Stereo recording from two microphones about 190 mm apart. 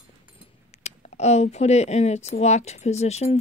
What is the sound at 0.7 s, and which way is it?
Speech, 35° left (ahead or behind).